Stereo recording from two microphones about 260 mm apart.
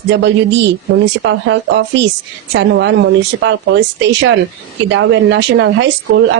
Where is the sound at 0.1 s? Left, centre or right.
Right.